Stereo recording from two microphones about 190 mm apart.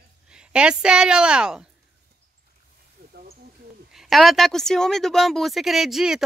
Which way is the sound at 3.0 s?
55° right (ahead or behind).